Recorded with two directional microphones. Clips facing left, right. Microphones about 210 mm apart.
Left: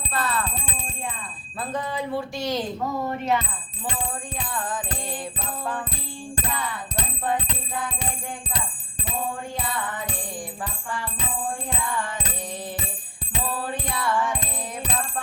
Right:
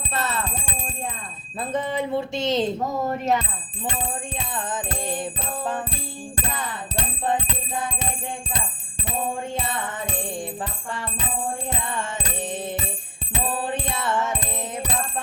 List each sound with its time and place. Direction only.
0.1 s music: 25° right (ahead or behind)
1.7 s speech: 20° right (ahead or behind)
3.1 s speech: 40° right (ahead or behind)
4.4 s speech: 20° right (ahead or behind)
13.4 s music: 25° right (ahead or behind)